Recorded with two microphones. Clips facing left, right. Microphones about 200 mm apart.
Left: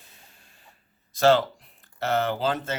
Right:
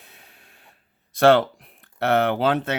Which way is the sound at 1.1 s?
60° right (ahead or behind).